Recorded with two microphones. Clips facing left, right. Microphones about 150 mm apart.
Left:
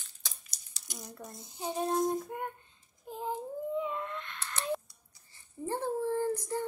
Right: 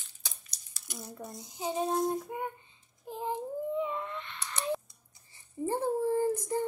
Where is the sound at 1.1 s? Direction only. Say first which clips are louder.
Right 3 dB; centre (ahead or behind).